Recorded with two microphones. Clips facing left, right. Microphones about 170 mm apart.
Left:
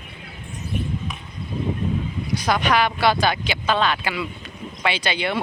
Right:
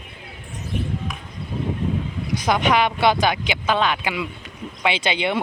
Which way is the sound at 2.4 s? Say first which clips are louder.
Right 1 dB; 20° right (ahead or behind).